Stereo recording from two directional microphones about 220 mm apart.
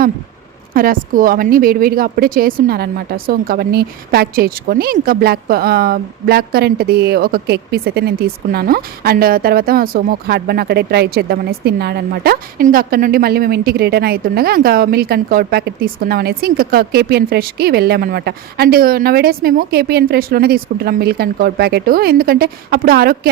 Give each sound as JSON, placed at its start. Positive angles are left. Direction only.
{"t": 0.7, "sound": "speech", "side_deg": -40}